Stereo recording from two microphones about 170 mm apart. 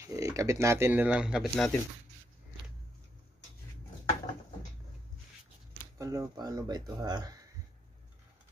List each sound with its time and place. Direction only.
0.0 s speech: 20° right (ahead or behind); by 1.8 s centre (ahead or behind)
5.9 s speech: 20° right (ahead or behind)